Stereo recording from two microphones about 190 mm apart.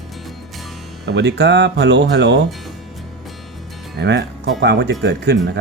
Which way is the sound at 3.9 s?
65° right (ahead or behind).